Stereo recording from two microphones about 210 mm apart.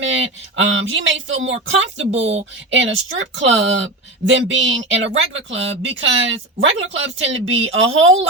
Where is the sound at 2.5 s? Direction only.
60° right (ahead or behind).